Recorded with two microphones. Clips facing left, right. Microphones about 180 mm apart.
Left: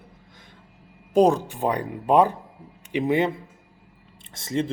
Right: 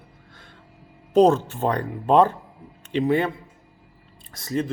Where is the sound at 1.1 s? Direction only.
10° left (ahead or behind).